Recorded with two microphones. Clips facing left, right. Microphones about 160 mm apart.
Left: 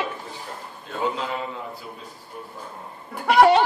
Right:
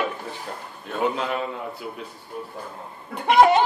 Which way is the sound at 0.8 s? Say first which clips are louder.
Right 2 dB; 65° right (ahead or behind).